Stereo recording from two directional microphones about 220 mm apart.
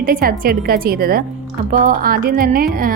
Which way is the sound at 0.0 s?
40° right (ahead or behind).